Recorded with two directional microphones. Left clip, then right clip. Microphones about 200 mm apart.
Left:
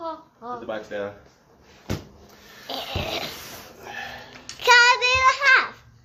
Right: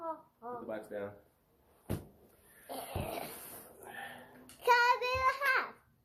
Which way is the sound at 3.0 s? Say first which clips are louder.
Left 12 dB; 30° left (ahead or behind).